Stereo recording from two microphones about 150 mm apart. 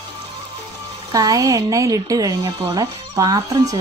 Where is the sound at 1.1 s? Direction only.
25° right (ahead or behind).